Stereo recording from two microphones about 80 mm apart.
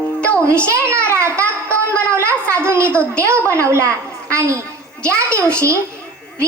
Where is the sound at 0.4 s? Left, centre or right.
Right.